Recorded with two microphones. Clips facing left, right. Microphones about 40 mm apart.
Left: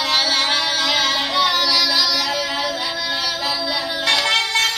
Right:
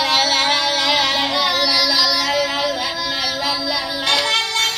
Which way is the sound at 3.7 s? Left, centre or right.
Centre.